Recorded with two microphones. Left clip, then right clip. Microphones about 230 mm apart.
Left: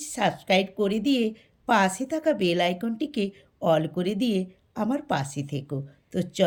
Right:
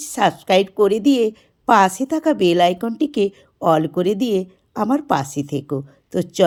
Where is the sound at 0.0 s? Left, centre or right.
Centre.